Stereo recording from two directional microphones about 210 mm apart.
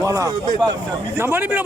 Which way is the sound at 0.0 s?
15° right (ahead or behind).